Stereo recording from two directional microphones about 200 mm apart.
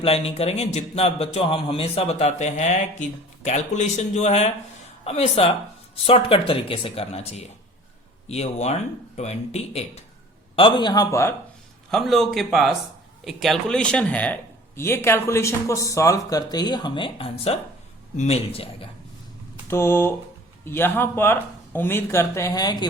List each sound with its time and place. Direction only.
0.0 s a man's voice: 30° left (ahead or behind); by 11.3 s 15° left (ahead or behind)
11.9 s speech: centre (ahead or behind); by 18.9 s 30° left (ahead or behind)
19.6 s speech: 10° left (ahead or behind)